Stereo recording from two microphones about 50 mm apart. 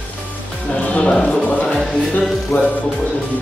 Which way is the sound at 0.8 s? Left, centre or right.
Left.